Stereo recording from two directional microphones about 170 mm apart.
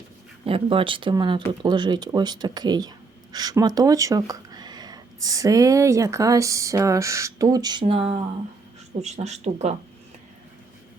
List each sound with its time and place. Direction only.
0.4 s speech: 30° right (ahead or behind)
9.0 s speech: 40° right (ahead or behind)